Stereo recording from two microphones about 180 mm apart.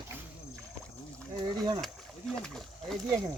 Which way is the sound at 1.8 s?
Centre (ahead or behind).